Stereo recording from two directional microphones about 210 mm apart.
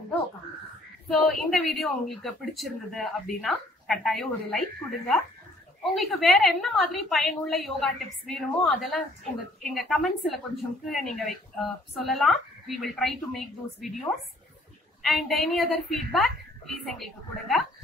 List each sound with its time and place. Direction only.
1.0 s a woman's voice: centre (ahead or behind)
15.0 s a woman's voice: centre (ahead or behind)